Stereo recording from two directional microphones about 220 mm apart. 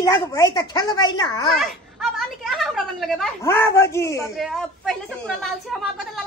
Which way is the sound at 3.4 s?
10° left (ahead or behind).